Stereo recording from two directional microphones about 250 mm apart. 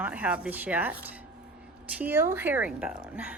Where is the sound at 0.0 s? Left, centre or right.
Centre.